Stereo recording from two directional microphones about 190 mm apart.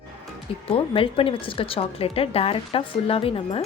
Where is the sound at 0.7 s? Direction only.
30° left (ahead or behind).